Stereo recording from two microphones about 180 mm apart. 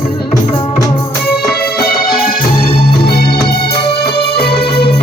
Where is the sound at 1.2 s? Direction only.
60° left (ahead or behind).